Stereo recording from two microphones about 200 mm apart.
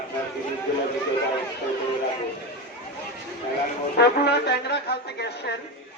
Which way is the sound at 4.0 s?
55° left (ahead or behind).